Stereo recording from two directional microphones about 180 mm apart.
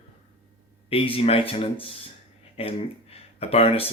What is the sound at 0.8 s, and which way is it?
Speech, 30° left (ahead or behind).